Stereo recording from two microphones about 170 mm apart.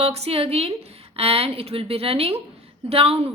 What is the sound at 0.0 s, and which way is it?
Speech, 35° right (ahead or behind).